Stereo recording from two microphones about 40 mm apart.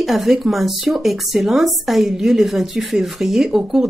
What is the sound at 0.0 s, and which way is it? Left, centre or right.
A woman's voice, centre.